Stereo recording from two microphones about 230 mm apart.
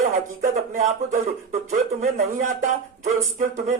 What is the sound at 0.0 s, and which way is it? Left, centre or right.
Speech, right.